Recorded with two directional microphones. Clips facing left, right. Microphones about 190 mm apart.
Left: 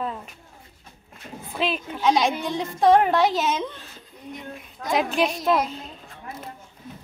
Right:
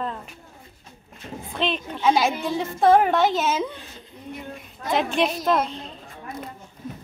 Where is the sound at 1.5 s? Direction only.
5° left (ahead or behind).